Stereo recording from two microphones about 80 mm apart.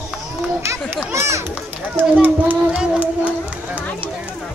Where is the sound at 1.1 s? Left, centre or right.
Right.